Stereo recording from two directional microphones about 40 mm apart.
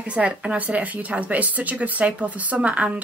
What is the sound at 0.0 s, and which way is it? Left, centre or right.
Speech, right.